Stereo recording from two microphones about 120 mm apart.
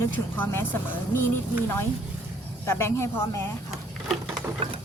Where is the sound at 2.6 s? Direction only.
20° left (ahead or behind).